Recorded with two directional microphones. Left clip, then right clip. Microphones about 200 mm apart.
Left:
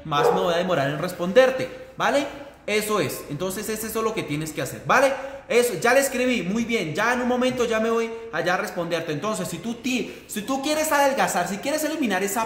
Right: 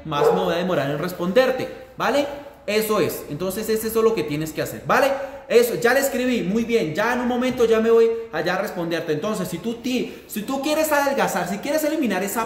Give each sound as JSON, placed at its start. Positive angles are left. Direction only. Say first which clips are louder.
{"t": 0.1, "sound": "a man's voice", "louder": "right 1 dB", "side_deg": 20}